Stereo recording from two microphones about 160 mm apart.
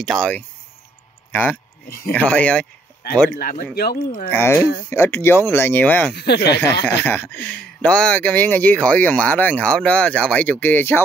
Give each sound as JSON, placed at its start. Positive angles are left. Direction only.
{"t": 0.0, "sound": "speech", "side_deg": 5}
{"t": 3.3, "sound": "speech", "side_deg": 70}
{"t": 4.3, "sound": "speech", "side_deg": 15}
{"t": 6.1, "sound": "speech", "side_deg": 90}
{"t": 6.6, "sound": "speech", "side_deg": 15}